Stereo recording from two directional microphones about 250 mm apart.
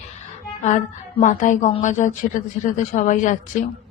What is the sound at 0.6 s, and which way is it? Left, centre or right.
A woman's voice, left.